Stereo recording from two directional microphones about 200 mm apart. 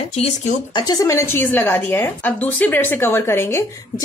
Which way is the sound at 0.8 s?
15° left (ahead or behind).